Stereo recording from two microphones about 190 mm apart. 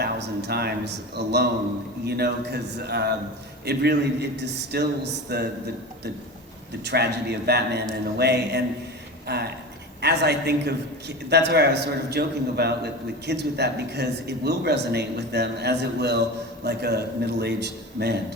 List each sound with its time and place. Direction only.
0.0 s a man's voice: 60° right (ahead or behind)
6.8 s a man's voice: 60° right (ahead or behind)